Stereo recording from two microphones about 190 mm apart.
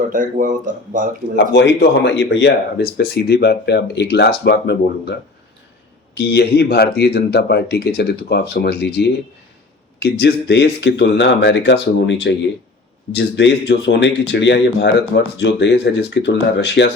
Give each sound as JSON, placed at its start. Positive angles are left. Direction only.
{"t": 0.1, "sound": "speech", "side_deg": -45}
{"t": 2.0, "sound": "speech", "side_deg": 65}
{"t": 6.1, "sound": "speech", "side_deg": 60}